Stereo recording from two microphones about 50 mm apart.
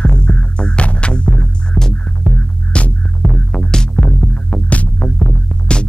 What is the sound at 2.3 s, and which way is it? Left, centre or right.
Music, right.